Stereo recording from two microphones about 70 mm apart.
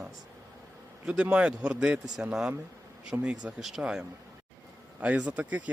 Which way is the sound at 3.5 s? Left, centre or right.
Centre.